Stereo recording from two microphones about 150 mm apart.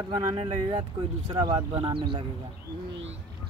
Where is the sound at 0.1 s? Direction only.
30° right (ahead or behind).